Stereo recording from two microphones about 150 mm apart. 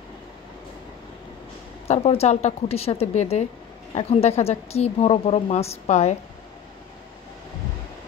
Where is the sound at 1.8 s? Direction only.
45° left (ahead or behind).